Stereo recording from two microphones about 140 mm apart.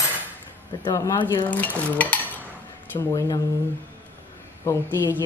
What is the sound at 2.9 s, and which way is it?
Speech, 20° left (ahead or behind).